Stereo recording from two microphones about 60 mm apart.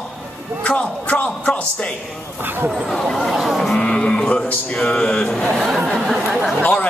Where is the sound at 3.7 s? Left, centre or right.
Centre.